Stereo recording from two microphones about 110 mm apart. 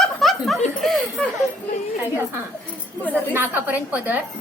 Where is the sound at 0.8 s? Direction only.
Centre (ahead or behind).